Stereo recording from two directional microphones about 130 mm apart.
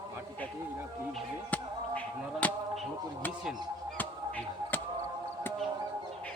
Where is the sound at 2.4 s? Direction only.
10° left (ahead or behind).